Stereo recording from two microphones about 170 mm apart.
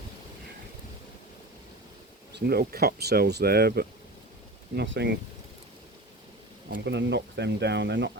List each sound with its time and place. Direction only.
2.3 s speech: 70° right (ahead or behind); by 5.1 s 85° right
6.7 s speech: 75° right (ahead or behind); by 8.2 s 90° right